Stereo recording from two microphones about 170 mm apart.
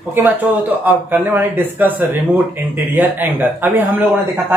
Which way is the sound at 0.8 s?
10° right (ahead or behind).